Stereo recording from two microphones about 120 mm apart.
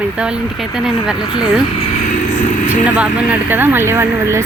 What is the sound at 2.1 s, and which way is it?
Vehicle, 90° left.